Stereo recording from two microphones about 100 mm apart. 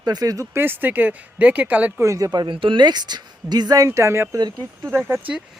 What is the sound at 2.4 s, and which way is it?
Speech, 55° right (ahead or behind).